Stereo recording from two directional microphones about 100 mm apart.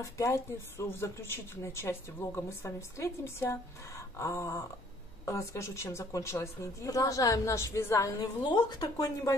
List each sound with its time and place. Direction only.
0.0 s a woman's voice: 30° left (ahead or behind)
8.2 s a woman's voice: 45° left (ahead or behind)